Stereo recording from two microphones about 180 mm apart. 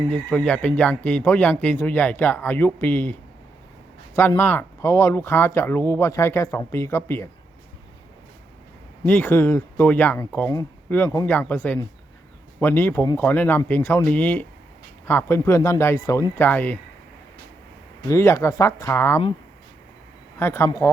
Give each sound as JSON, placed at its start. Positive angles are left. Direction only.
{"t": 0.1, "sound": "speech", "side_deg": 10}
{"t": 9.0, "sound": "speech", "side_deg": 10}
{"t": 18.1, "sound": "speech", "side_deg": 15}
{"t": 20.4, "sound": "speech", "side_deg": 15}